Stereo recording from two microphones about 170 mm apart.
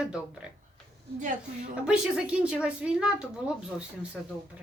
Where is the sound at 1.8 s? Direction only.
5° right (ahead or behind).